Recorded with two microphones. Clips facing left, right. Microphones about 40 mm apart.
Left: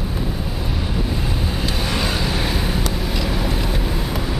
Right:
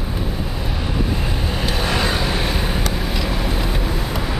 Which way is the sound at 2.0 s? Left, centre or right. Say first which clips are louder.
Right 1 dB; centre.